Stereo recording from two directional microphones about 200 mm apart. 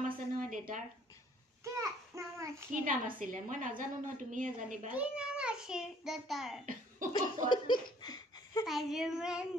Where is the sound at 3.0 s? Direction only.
40° right (ahead or behind).